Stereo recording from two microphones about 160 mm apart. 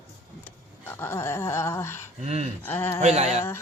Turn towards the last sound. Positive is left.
turn(degrees=-45)  # may be behind; listen again after turning